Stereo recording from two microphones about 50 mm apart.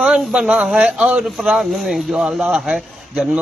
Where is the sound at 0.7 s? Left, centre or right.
Centre.